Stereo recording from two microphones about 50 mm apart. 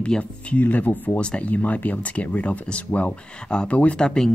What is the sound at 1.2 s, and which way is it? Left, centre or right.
Speech, left.